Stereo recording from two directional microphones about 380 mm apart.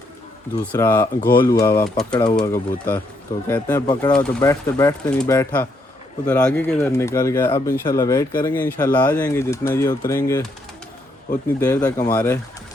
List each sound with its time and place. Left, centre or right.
0.6 s speech: centre
1.2 s speech: left
1.5 s speech: centre
11.6 s speech: centre